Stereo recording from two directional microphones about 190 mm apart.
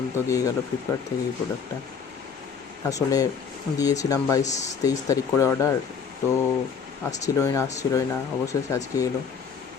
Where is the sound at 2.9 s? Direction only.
20° left (ahead or behind).